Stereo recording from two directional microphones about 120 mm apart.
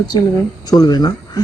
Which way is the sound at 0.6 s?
35° left (ahead or behind).